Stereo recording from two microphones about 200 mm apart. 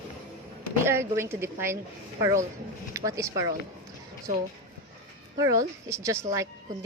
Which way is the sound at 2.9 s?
15° right (ahead or behind).